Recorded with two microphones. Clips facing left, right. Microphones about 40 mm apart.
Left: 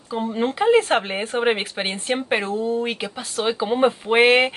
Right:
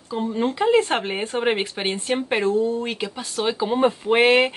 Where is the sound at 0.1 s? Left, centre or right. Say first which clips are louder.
Even; centre.